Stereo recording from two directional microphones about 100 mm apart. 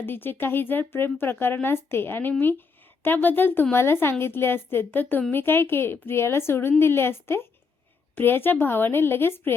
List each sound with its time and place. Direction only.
0.0 s speech: 20° left (ahead or behind)